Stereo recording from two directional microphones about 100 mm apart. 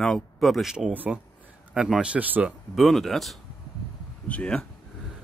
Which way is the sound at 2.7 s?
Centre (ahead or behind).